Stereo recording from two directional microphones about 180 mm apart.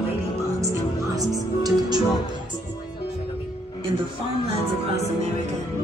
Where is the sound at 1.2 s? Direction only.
20° right (ahead or behind).